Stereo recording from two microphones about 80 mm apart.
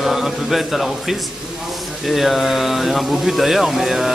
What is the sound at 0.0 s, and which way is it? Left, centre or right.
Speech, centre.